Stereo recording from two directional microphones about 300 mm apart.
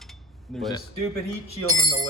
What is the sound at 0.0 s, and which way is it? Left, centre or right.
Cutlery, centre.